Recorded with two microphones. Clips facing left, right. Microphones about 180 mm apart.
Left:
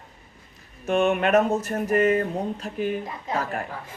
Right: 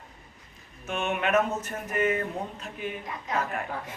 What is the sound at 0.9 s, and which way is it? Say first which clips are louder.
Speech: left 7 dB; 40° left (ahead or behind).